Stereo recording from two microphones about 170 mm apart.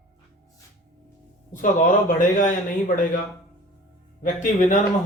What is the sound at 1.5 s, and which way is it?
Speech, 50° left (ahead or behind).